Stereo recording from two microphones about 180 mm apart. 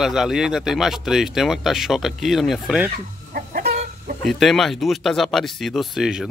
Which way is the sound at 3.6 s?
40° right (ahead or behind).